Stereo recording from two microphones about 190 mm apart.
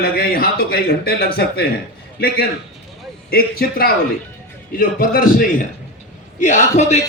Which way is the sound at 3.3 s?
50° left (ahead or behind).